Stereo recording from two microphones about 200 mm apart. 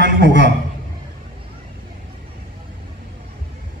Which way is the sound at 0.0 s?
65° right (ahead or behind).